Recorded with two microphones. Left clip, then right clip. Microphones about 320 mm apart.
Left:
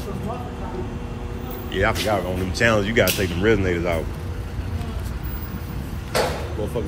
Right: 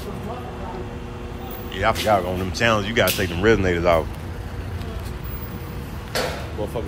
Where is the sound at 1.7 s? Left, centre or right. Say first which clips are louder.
Right 2 dB; centre.